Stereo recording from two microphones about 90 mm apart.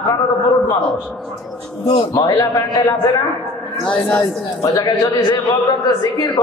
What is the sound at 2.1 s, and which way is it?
A man's voice, 40° left (ahead or behind).